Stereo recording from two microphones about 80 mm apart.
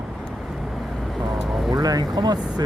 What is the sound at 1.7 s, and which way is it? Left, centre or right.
Speech, right.